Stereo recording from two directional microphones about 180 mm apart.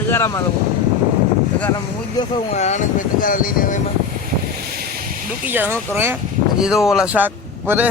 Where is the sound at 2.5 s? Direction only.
40° left (ahead or behind).